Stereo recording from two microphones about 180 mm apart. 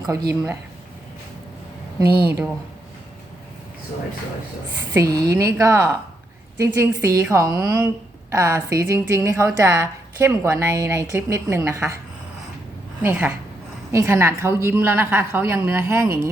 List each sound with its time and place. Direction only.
0.1 s speech: 20° right (ahead or behind)
4.9 s a woman's voice: 20° right (ahead or behind)
13.0 s a woman's voice: 10° right (ahead or behind)